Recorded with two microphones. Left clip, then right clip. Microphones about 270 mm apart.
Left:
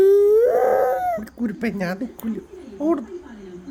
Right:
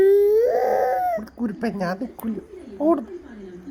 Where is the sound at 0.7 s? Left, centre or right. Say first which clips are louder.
Left 1 dB; left.